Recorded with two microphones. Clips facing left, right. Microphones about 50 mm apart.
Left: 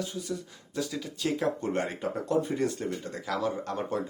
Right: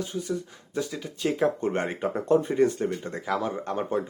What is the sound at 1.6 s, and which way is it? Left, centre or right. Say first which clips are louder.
Speech: right 3 dB; right.